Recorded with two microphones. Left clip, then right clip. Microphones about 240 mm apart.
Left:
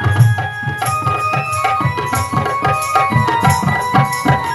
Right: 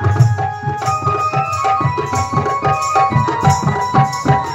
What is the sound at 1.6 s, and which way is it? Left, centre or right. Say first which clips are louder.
Music: right 1 dB; left.